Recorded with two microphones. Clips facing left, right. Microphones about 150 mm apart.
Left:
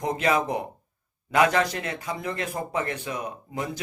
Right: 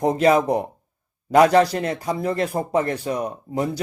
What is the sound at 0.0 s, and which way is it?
A man's voice, 35° right (ahead or behind).